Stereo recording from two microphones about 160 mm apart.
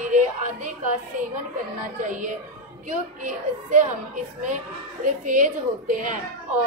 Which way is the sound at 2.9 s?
55° right (ahead or behind).